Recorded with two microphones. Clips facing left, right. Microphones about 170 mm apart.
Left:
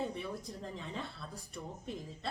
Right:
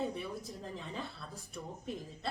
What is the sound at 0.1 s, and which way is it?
A woman's voice, centre (ahead or behind).